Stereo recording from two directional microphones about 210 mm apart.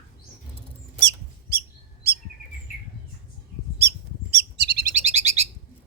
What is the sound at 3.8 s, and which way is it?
Bird, 50° right (ahead or behind).